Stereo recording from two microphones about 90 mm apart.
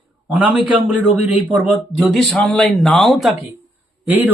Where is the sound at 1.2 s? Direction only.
15° right (ahead or behind).